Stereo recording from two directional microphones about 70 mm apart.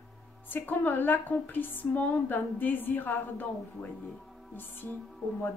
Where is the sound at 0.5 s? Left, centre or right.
Left.